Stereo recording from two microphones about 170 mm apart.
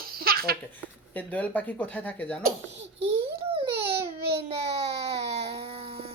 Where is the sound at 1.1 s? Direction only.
10° left (ahead or behind).